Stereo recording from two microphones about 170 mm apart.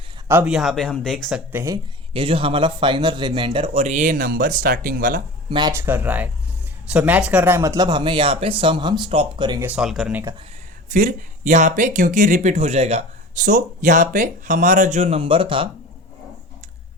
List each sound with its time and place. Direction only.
0.3 s speech: 10° right (ahead or behind)
1.5 s speech: 20° right (ahead or behind)
2.1 s speech: 30° right (ahead or behind); by 5.2 s 60° right (ahead or behind)
5.5 s speech: 25° right (ahead or behind)
9.6 s speech: 10° right (ahead or behind)
10.8 s speech: 50° right (ahead or behind)
13.4 s speech: 50° right (ahead or behind); by 15.7 s 30° right (ahead or behind)